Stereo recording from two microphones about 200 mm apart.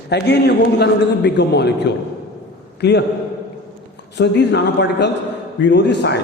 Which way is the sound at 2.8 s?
55° left (ahead or behind).